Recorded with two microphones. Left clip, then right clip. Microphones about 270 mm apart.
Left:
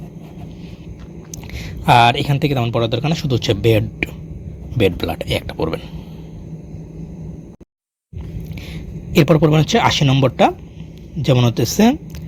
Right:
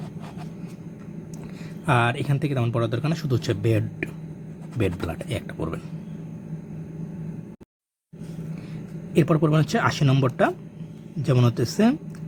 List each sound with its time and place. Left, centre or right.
1.9 s speech: centre
9.1 s speech: centre